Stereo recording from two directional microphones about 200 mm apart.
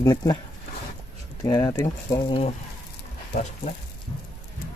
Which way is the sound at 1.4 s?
20° left (ahead or behind).